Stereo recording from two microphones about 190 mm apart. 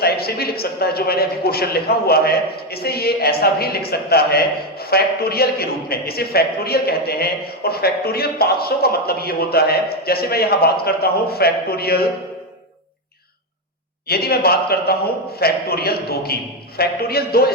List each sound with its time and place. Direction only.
0.0 s a man's voice: 55° left (ahead or behind)
14.1 s a man's voice: 55° left (ahead or behind)